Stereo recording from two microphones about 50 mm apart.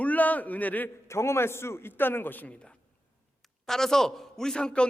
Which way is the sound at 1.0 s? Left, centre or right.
Left.